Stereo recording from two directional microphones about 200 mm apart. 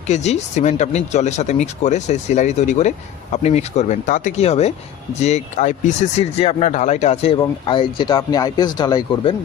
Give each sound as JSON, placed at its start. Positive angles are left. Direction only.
{"t": 0.1, "sound": "speech", "side_deg": 35}